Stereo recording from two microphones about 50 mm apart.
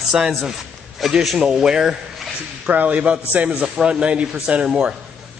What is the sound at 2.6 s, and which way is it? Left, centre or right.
A man's voice, right.